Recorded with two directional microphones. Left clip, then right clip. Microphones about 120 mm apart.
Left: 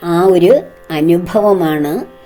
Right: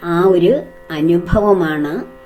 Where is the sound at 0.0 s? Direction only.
45° left (ahead or behind).